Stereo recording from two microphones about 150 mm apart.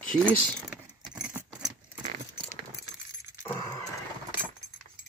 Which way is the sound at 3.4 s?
15° left (ahead or behind).